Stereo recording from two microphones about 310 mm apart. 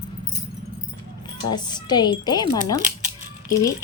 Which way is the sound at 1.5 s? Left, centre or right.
Centre.